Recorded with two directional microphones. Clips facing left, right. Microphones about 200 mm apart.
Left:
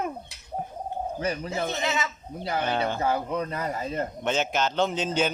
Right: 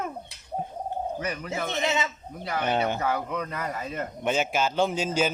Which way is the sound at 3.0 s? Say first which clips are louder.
Left 2 dB; 30° left (ahead or behind).